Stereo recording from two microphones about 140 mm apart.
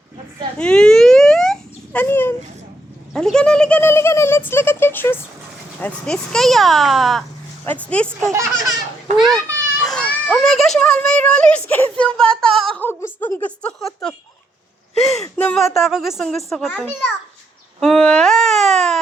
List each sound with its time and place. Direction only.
0.6 s a sound: 5° left (ahead or behind)
3.1 s a child's voice: 5° left (ahead or behind)
5.8 s speech: 5° left (ahead or behind)
7.6 s a child's voice: 10° left (ahead or behind)
8.3 s speech: 20° right (ahead or behind)
9.1 s a child's voice: centre (ahead or behind)
12.8 s a child's voice: 15° left (ahead or behind)
15.2 s speech: 5° left (ahead or behind)